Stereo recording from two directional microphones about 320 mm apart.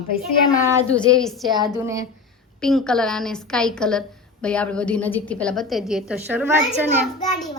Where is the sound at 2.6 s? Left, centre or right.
Centre.